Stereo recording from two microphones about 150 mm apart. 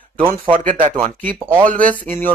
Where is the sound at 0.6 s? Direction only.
60° right (ahead or behind).